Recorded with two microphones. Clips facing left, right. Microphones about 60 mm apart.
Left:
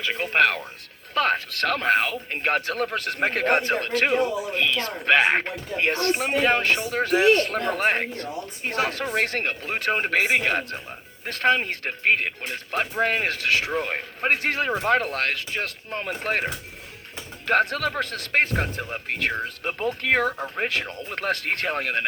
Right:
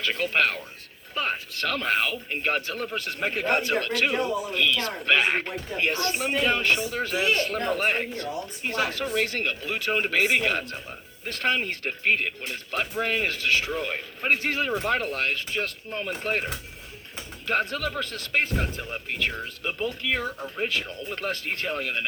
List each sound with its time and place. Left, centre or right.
0.0 s speech: centre
0.3 s speech: left
1.1 s speech: left
1.6 s speech: left
3.6 s speech: left